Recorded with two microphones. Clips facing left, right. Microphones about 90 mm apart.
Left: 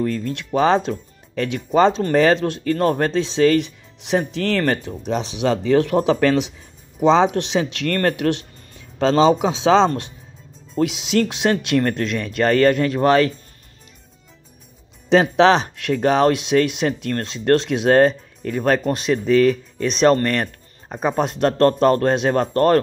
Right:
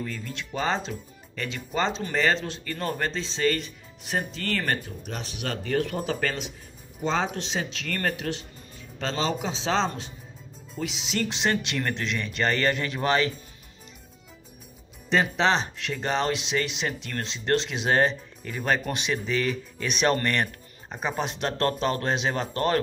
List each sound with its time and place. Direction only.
0.0 s a man's voice: 60° left (ahead or behind)
15.0 s speech: 70° left (ahead or behind); by 18.8 s 55° left (ahead or behind)
18.8 s speech: 40° left (ahead or behind)